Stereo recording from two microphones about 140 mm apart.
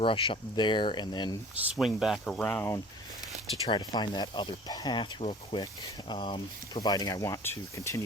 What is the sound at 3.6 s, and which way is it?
Speech, 35° left (ahead or behind).